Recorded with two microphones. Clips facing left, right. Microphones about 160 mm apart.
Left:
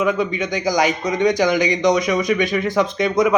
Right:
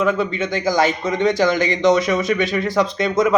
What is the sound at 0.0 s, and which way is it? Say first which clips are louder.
A man's voice: even; 15° left (ahead or behind).